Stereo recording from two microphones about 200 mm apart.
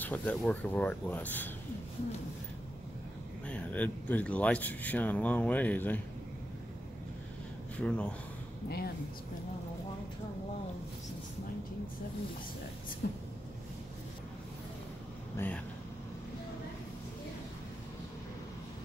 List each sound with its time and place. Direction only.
0.0 s speech: 10° left (ahead or behind)
3.4 s speech: 5° left (ahead or behind)
7.7 s speech: 5° left (ahead or behind)
8.6 s speech: 50° left (ahead or behind)
13.0 s a sound: 50° left (ahead or behind)
15.3 s speech: 10° left (ahead or behind)